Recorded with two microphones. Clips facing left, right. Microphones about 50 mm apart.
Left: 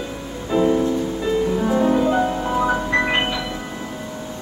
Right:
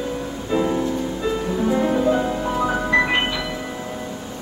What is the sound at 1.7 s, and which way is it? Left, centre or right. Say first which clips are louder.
Music: left 2 dB; centre.